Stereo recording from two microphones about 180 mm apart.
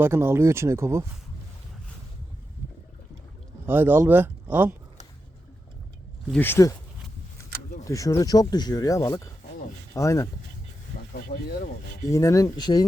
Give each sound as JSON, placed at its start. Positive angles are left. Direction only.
{"t": 0.0, "sound": "speech", "side_deg": -10}
{"t": 3.7, "sound": "speech", "side_deg": -10}
{"t": 6.3, "sound": "speech", "side_deg": 10}
{"t": 7.9, "sound": "speech", "side_deg": 20}
{"t": 11.1, "sound": "speech", "side_deg": 55}
{"t": 12.1, "sound": "speech", "side_deg": 15}